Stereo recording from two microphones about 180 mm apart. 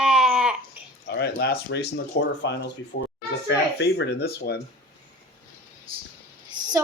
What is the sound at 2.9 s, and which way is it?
Speech, 65° left (ahead or behind).